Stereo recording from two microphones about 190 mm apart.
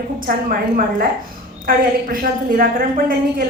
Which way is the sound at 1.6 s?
50° right (ahead or behind).